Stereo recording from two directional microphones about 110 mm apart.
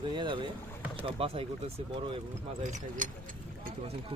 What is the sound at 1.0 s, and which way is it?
Speech, 60° right (ahead or behind).